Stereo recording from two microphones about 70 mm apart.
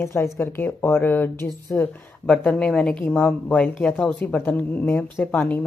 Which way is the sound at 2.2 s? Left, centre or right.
Centre.